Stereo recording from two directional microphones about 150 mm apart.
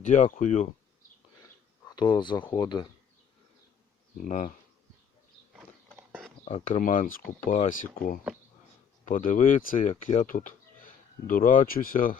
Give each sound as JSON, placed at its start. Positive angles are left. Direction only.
{"t": 0.0, "sound": "speech", "side_deg": 55}
{"t": 2.1, "sound": "speech", "side_deg": 30}
{"t": 4.2, "sound": "speech", "side_deg": 60}
{"t": 6.0, "sound": "a sound", "side_deg": -10}
{"t": 6.4, "sound": "speech", "side_deg": 50}
{"t": 9.9, "sound": "speech", "side_deg": 50}